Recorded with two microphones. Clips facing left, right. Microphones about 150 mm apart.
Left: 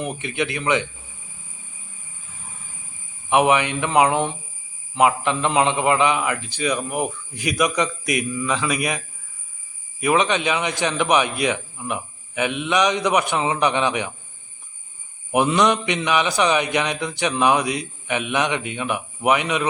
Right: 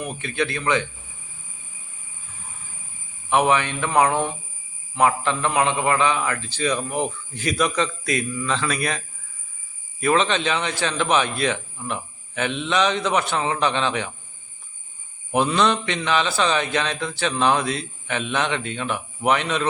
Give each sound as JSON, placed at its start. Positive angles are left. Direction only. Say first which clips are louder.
{"t": 0.0, "sound": "speech", "louder": "left 1 dB", "side_deg": 20}
{"t": 3.2, "sound": "a man's voice", "louder": "left 2 dB", "side_deg": 15}
{"t": 10.0, "sound": "a man's voice", "louder": "left 1 dB", "side_deg": 15}
{"t": 15.3, "sound": "a man's voice", "louder": "left 2 dB", "side_deg": 15}